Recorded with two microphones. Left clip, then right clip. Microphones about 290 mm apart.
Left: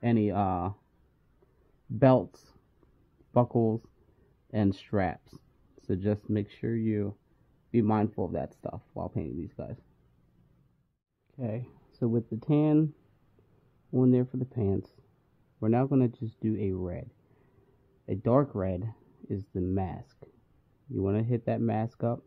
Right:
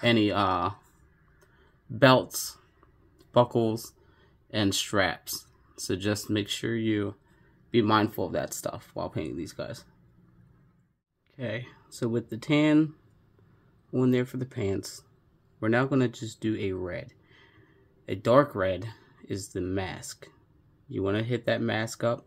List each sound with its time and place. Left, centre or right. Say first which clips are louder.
0.0 s speech: right 4 dB; left
2.0 s speech: right 3 dB; left
11.3 s speech: right 3 dB; left
13.9 s speech: even; centre
18.0 s speech: right 5 dB; left